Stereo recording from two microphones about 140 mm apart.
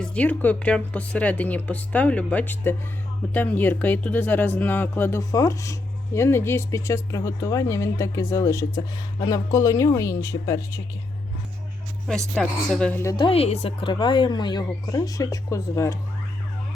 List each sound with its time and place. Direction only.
0.0 s speech: 10° left (ahead or behind)
12.3 s speech: 5° left (ahead or behind)
13.1 s a woman's voice: 40° left (ahead or behind); by 16.0 s 20° left (ahead or behind)